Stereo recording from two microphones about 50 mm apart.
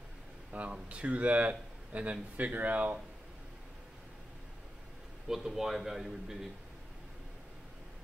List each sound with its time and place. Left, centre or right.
0.5 s a sound: right
0.8 s speech: right
5.3 s a man's voice: centre